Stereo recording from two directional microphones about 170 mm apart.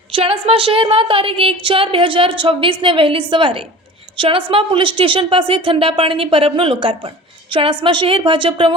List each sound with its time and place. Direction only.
0.1 s a woman's voice: 30° right (ahead or behind)